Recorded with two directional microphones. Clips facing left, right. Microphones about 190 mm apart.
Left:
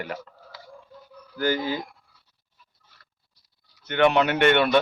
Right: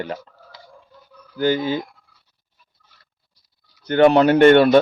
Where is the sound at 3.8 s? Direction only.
35° right (ahead or behind).